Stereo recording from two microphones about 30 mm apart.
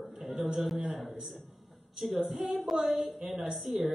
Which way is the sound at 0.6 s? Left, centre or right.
Centre.